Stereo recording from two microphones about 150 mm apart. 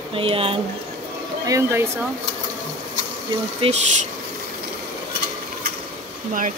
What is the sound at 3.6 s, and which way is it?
Speech, 35° right (ahead or behind).